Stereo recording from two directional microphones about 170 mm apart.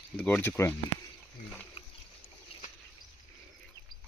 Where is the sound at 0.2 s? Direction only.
10° left (ahead or behind).